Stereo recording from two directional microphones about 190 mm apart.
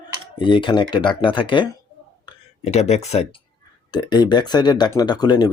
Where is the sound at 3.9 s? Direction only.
20° left (ahead or behind).